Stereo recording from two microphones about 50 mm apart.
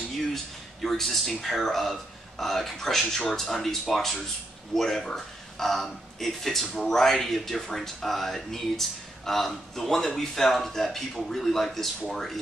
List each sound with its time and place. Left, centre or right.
0.8 s speech: centre